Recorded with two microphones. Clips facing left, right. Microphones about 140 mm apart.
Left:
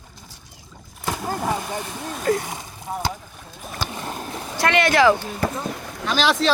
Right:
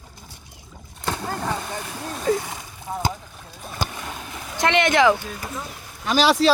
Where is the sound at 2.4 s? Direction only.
20° left (ahead or behind).